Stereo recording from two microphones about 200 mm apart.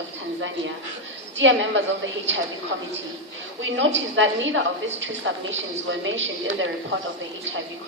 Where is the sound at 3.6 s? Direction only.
70° right (ahead or behind).